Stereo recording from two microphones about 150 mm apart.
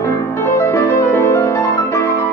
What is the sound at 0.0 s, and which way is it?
Music, 20° left (ahead or behind).